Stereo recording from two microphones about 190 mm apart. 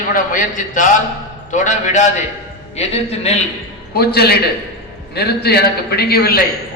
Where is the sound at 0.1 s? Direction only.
45° left (ahead or behind).